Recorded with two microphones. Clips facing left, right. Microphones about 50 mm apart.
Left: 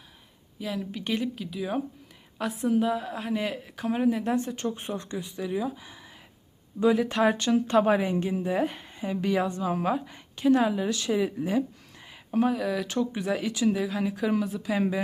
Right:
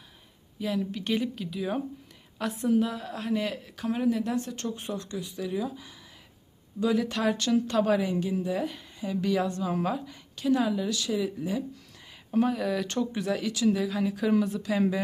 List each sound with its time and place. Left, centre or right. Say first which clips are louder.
0.6 s speech: right 2 dB; centre; by 5.3 s left
5.4 s a woman's voice: left 2 dB; centre
10.1 s a woman's voice: left 4 dB; left
12.3 s speech: left 1 dB; centre
13.1 s speech: left 1 dB; centre